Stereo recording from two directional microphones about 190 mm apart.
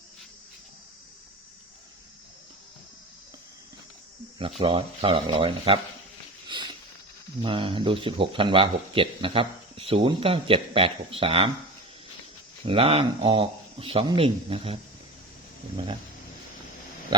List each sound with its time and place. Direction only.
4.6 s speech: 30° right (ahead or behind)
6.5 s a sound: 25° right (ahead or behind)
7.4 s speech: 30° right (ahead or behind)
12.6 s speech: 30° right (ahead or behind)